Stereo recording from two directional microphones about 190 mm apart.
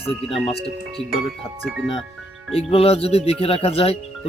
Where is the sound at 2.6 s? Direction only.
30° left (ahead or behind).